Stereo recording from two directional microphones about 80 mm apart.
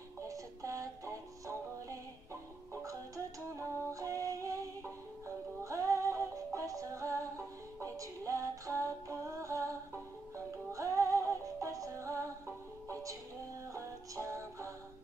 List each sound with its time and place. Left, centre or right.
0.3 s music: right
2.7 s music: right
5.6 s synthetic singing: right
10.3 s music: right